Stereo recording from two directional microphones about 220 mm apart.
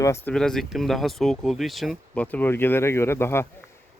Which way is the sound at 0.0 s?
10° left (ahead or behind).